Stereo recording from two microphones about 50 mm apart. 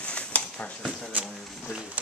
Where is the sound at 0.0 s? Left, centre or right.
Left.